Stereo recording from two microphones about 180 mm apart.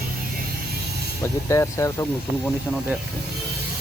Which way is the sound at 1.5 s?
15° left (ahead or behind).